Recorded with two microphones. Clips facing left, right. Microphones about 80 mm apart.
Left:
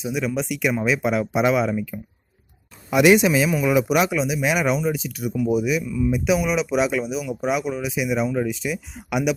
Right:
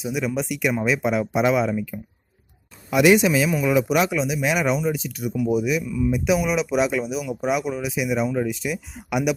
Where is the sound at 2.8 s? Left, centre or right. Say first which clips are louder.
Left 1 dB; left.